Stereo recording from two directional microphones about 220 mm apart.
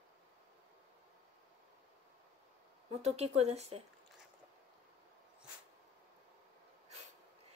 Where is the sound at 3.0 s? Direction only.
30° right (ahead or behind).